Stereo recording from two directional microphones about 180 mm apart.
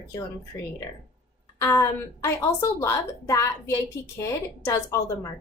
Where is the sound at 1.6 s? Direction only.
15° left (ahead or behind).